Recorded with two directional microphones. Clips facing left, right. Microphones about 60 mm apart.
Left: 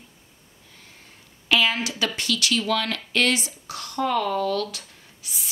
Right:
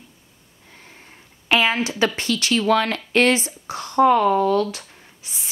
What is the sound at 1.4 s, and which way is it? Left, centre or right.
Speech, right.